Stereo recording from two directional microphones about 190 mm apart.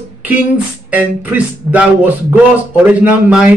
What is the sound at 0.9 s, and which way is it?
A man's voice, 10° right (ahead or behind).